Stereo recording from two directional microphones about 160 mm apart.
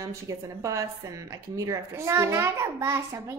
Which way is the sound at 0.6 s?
20° right (ahead or behind).